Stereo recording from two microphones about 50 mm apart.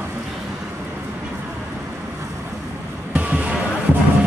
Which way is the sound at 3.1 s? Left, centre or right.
Right.